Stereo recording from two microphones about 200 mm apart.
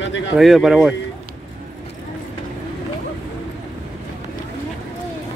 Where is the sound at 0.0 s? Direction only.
65° left (ahead or behind).